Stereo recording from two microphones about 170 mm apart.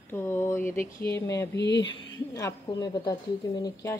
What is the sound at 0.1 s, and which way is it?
A woman's voice, 15° left (ahead or behind).